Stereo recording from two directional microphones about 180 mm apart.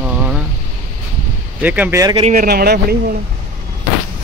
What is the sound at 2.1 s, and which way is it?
Speech, 35° right (ahead or behind).